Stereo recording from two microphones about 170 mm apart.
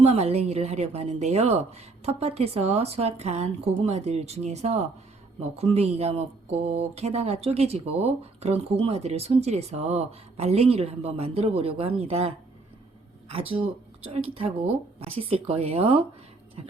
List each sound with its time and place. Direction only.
0.0 s speech: 40° right (ahead or behind)
14.1 s speech: 35° right (ahead or behind)